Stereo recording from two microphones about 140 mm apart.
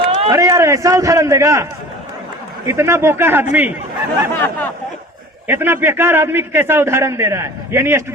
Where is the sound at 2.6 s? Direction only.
20° right (ahead or behind).